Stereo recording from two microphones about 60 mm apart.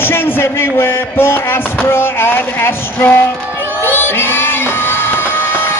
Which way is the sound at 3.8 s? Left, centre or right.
Left.